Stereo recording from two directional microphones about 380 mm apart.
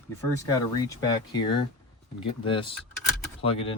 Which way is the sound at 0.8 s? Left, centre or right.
Centre.